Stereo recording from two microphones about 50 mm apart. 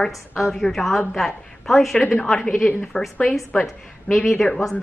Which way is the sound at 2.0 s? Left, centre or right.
Left.